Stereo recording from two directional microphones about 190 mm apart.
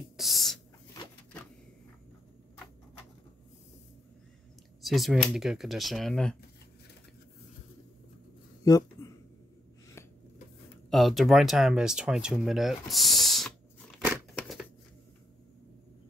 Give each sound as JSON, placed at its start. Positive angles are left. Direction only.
{"t": 0.2, "sound": "a sound", "side_deg": 0}
{"t": 4.8, "sound": "speech", "side_deg": 0}
{"t": 8.6, "sound": "speech", "side_deg": 20}
{"t": 10.9, "sound": "speech", "side_deg": 0}
{"t": 14.3, "sound": "scissors", "side_deg": 0}